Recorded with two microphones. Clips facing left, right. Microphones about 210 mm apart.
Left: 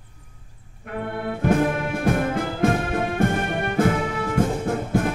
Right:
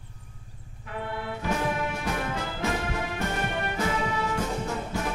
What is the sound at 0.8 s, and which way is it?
Music, 55° left (ahead or behind).